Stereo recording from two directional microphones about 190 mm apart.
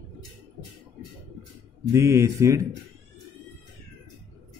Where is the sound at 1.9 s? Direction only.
15° right (ahead or behind).